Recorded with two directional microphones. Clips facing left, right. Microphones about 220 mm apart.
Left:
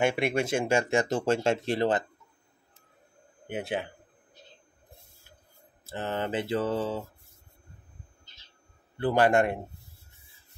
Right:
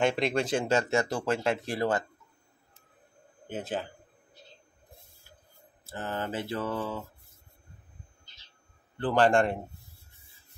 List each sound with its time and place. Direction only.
0.0 s speech: 10° left (ahead or behind)
5.9 s mantra: 25° left (ahead or behind)
9.0 s speech: 10° left (ahead or behind)